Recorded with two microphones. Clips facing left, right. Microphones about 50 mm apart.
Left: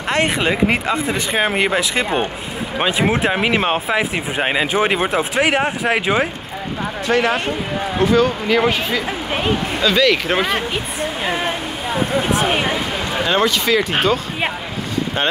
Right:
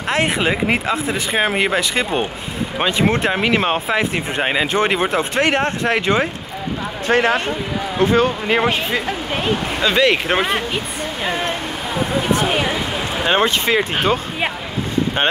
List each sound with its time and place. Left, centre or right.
0.1 s speech: centre
7.1 s speech: right
9.0 s speech: centre
9.8 s speech: right
10.3 s speech: centre
10.7 s speech: centre
13.2 s speech: right